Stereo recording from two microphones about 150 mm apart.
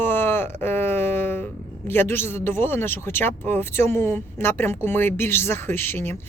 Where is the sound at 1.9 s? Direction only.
15° left (ahead or behind).